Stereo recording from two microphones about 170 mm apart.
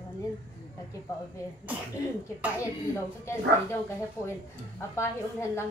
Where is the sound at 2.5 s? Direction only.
15° left (ahead or behind).